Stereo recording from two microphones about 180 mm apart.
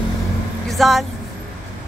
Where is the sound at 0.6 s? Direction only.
Centre (ahead or behind).